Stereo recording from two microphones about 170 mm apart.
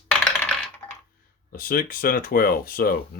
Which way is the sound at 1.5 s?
60° left (ahead or behind).